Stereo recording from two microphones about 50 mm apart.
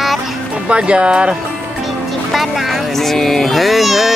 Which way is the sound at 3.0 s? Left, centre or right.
Centre.